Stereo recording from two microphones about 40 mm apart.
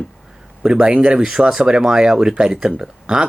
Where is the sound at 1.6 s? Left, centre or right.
Centre.